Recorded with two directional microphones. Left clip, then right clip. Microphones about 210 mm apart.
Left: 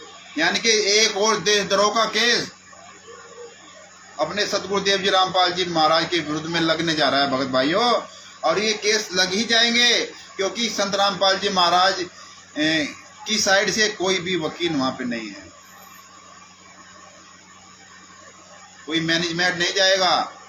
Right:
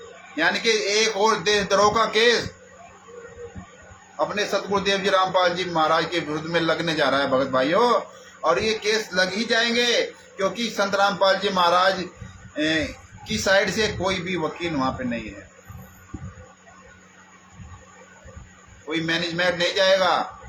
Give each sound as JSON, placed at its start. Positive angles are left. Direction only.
{"t": 0.3, "sound": "a man's voice", "side_deg": -15}
{"t": 4.4, "sound": "a man's voice", "side_deg": -15}
{"t": 18.9, "sound": "a man's voice", "side_deg": -15}